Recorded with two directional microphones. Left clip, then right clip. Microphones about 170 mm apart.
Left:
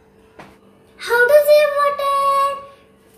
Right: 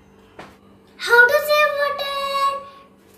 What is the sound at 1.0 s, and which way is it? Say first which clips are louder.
Child singing: left 1 dB; 20° left (ahead or behind).